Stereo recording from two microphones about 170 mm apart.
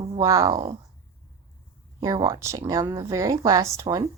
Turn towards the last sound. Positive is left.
turn(degrees=-20)  # may be behind; listen again after turning